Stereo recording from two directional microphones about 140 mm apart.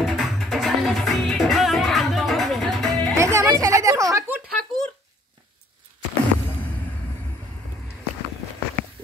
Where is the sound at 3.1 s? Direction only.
20° right (ahead or behind).